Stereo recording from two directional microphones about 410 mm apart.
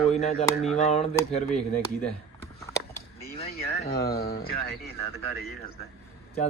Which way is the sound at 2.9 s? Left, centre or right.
Centre.